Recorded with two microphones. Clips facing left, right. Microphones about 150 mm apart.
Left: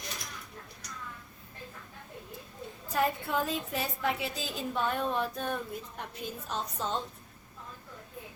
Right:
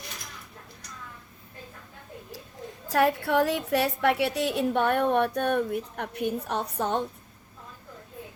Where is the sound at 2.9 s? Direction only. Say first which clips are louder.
Right 7 dB; 80° right.